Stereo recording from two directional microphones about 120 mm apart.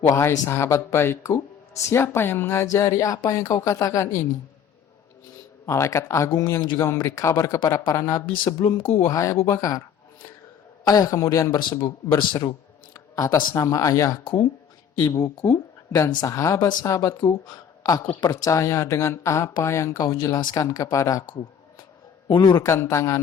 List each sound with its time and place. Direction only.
0.1 s speech: 25° left (ahead or behind)
5.6 s speech: 25° left (ahead or behind)
8.6 s speech: 50° left (ahead or behind)
9.0 s speech: 25° left (ahead or behind)
10.8 s a man's voice: 30° left (ahead or behind)
15.4 s speech: 30° left (ahead or behind)
17.5 s a sound: 30° left (ahead or behind)
18.2 s speech: 30° left (ahead or behind)
22.3 s speech: 40° left (ahead or behind)
22.6 s speech: 25° left (ahead or behind)